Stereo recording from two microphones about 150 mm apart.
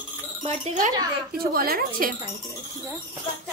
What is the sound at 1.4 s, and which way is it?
Speech, 80° right.